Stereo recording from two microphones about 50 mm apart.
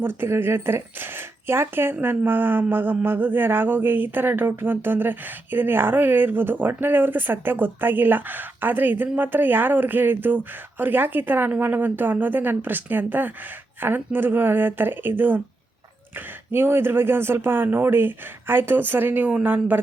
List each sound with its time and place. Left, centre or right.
0.0 s speech: right